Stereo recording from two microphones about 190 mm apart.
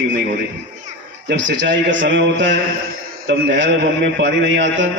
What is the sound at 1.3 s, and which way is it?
A man's voice, 70° right (ahead or behind).